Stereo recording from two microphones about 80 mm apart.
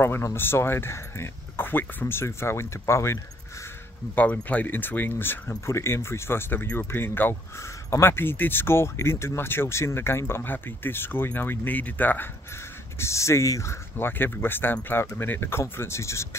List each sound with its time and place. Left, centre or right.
0.0 s speech: left
4.1 s speech: centre
13.0 s speech: left